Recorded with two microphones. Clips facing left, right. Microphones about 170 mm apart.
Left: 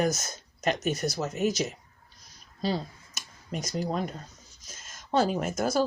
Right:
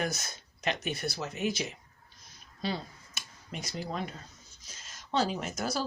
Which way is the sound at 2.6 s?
40° left (ahead or behind).